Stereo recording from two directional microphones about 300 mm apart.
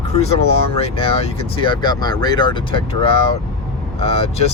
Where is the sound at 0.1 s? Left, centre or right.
Left.